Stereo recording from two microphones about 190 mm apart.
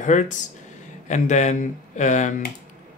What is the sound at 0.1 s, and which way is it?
Speech, 40° left (ahead or behind).